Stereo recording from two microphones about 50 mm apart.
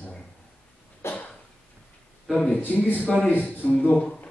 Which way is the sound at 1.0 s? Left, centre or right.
Left.